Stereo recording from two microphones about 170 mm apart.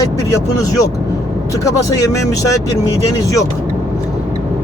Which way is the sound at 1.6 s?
20° left (ahead or behind).